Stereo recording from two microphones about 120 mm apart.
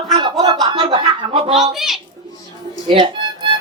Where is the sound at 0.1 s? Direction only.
40° right (ahead or behind).